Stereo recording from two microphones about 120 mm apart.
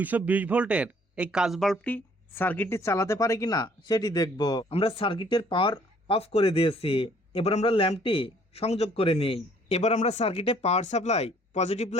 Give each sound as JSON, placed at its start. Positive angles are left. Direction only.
{"t": 0.0, "sound": "speech", "side_deg": -15}
{"t": 1.8, "sound": "speech", "side_deg": 15}
{"t": 4.7, "sound": "a man's voice", "side_deg": 50}